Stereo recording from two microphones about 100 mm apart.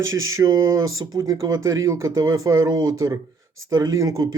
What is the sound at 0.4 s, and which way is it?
Speech, 35° right (ahead or behind).